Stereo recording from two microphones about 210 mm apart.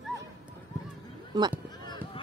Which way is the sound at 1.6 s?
20° left (ahead or behind).